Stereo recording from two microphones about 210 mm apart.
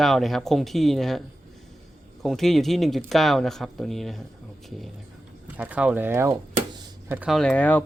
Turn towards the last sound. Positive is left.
turn(degrees=5)  # may be behind; listen again after turning